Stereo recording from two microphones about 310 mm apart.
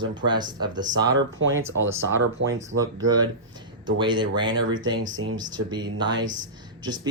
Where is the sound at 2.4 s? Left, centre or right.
Right.